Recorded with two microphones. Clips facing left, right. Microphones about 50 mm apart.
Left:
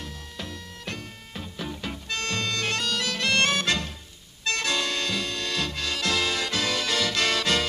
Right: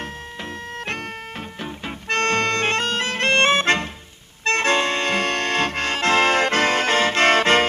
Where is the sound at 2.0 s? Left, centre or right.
Right.